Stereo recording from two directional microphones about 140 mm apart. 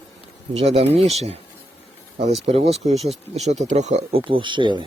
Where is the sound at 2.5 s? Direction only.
45° right (ahead or behind).